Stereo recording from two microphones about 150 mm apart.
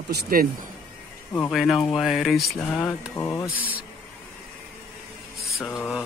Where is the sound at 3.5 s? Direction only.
10° right (ahead or behind).